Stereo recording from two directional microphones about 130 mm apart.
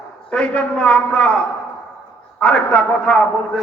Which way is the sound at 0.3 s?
10° left (ahead or behind).